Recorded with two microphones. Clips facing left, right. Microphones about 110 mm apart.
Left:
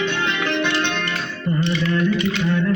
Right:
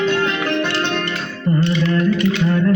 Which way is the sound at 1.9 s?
35° right (ahead or behind).